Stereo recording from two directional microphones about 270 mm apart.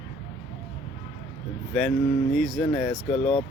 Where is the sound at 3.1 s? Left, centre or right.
Left.